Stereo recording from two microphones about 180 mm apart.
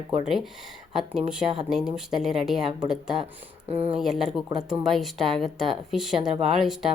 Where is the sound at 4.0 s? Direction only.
Centre (ahead or behind).